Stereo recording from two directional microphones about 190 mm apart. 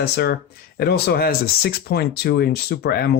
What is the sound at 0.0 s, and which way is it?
Speech, 60° left (ahead or behind).